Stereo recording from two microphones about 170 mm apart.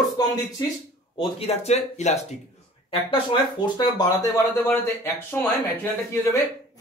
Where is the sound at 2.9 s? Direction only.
30° left (ahead or behind).